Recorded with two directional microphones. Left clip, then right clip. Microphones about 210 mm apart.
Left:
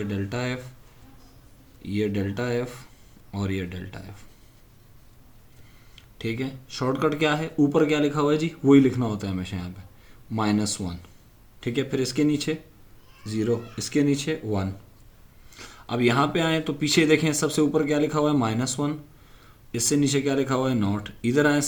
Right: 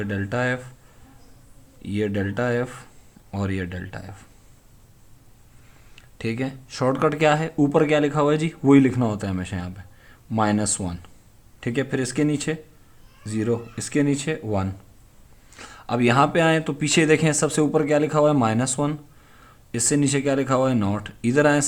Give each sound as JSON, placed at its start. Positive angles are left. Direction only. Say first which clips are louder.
{"t": 0.1, "sound": "speech", "louder": "right 5 dB", "side_deg": -35}
{"t": 1.8, "sound": "speech", "louder": "right 2 dB", "side_deg": -35}
{"t": 6.1, "sound": "speech", "louder": "right 2 dB", "side_deg": -35}